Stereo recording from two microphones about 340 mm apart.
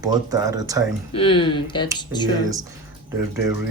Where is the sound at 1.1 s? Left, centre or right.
Centre.